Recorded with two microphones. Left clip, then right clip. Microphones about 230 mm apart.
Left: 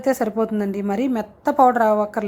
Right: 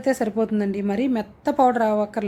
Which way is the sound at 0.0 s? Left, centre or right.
Centre.